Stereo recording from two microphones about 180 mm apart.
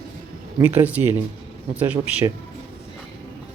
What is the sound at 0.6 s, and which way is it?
Speech, 10° right (ahead or behind).